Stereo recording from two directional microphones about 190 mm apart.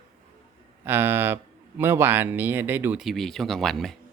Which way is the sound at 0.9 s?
10° right (ahead or behind).